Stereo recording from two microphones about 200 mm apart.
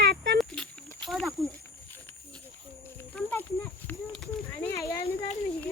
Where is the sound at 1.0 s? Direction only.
Centre (ahead or behind).